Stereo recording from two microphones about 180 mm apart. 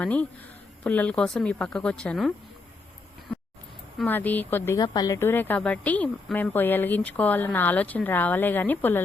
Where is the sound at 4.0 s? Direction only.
10° left (ahead or behind).